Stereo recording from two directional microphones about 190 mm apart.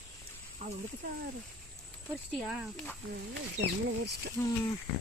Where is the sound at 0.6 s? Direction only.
40° right (ahead or behind).